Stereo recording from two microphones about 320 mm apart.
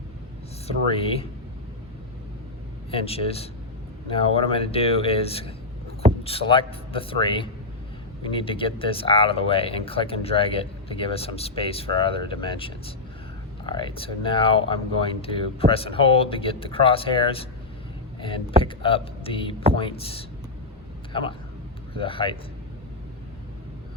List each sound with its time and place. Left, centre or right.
0.7 s speech: centre
2.9 s speech: centre